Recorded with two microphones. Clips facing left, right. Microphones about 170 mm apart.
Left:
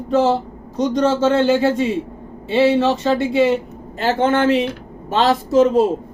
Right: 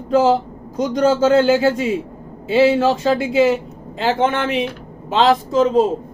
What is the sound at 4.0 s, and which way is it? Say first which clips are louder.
Speech: left 1 dB; 50° left (ahead or behind).